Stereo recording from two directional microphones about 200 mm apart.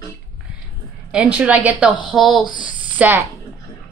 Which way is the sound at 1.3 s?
5° right (ahead or behind).